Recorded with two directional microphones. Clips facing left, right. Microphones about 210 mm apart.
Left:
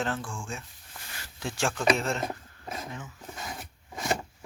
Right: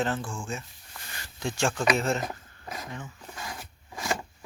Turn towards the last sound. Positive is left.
turn(degrees=20)  # may be behind; listen again after turning